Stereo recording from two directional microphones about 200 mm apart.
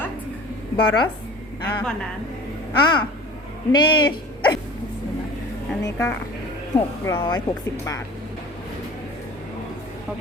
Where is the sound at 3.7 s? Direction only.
20° left (ahead or behind).